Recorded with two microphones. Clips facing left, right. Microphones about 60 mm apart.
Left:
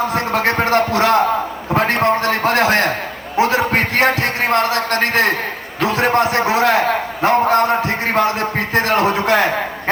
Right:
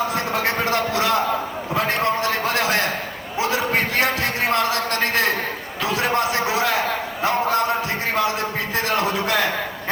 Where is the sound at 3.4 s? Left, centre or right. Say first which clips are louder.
Left 6 dB; left.